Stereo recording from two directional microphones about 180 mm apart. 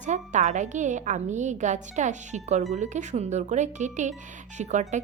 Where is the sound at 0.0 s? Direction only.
40° right (ahead or behind).